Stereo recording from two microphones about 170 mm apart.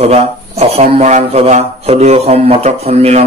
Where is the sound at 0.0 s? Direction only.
40° right (ahead or behind).